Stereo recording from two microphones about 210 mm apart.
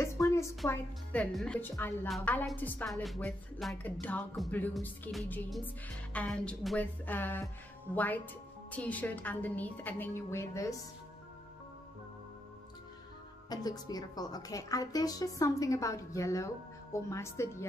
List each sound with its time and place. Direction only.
0.0 s a sound: 15° left (ahead or behind)
0.7 s a woman's voice: 5° left (ahead or behind)
13.5 s a woman's voice: 20° left (ahead or behind)